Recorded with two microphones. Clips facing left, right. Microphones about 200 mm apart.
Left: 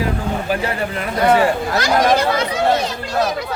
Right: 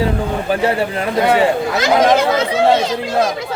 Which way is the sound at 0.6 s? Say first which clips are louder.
Right 5 dB; 30° right (ahead or behind).